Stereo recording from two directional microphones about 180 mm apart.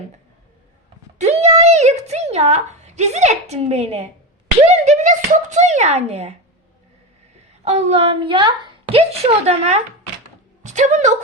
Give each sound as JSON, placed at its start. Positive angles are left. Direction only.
{"t": 1.2, "sound": "a woman's voice", "side_deg": -40}
{"t": 7.6, "sound": "a woman's voice", "side_deg": -35}